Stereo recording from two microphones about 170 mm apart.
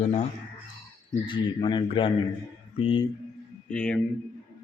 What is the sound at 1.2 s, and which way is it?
A man's voice, 25° left (ahead or behind).